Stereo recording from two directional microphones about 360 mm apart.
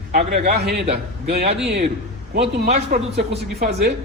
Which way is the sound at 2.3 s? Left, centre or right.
Right.